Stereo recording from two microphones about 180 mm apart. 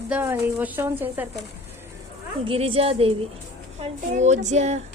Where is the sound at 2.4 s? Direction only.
30° right (ahead or behind).